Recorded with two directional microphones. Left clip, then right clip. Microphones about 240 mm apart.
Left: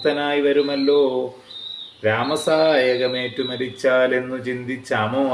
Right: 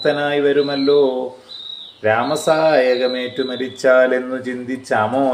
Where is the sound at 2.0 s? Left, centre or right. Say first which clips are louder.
Right 4 dB; centre.